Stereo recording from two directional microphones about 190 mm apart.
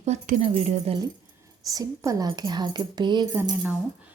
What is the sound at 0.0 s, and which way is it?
Speech, 40° right (ahead or behind).